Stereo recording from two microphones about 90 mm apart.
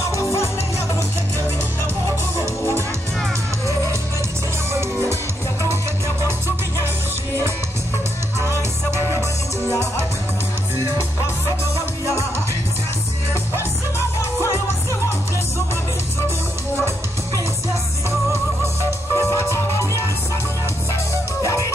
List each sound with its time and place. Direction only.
0.1 s music: 35° left (ahead or behind)
13.3 s music: 30° left (ahead or behind)
18.9 s music: 30° left (ahead or behind)
21.4 s music: 35° left (ahead or behind)